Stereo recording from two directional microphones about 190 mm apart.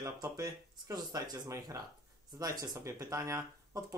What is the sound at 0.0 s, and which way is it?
Speech, 20° right (ahead or behind).